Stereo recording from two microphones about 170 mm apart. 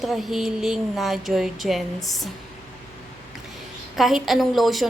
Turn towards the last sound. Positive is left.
turn(degrees=0)  # may be behind; listen again after turning